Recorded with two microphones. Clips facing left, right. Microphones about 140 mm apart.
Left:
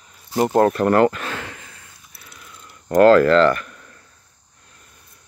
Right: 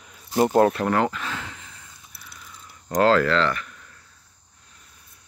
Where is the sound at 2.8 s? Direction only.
55° left (ahead or behind).